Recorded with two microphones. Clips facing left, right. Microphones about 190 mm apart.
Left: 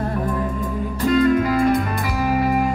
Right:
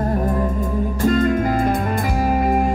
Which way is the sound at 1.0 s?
45° right (ahead or behind).